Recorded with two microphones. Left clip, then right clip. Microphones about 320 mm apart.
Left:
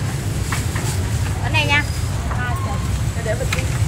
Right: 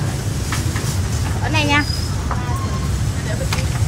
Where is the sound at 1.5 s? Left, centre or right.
Right.